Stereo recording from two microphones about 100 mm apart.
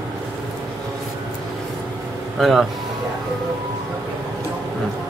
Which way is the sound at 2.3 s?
Centre (ahead or behind).